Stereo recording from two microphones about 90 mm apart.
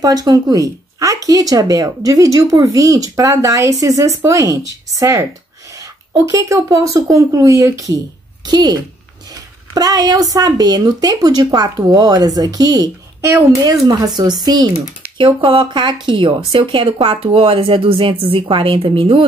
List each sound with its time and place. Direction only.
0.0 s speech: 45° right (ahead or behind)
8.5 s speech: 50° right (ahead or behind)
15.1 s a woman's voice: 70° right (ahead or behind)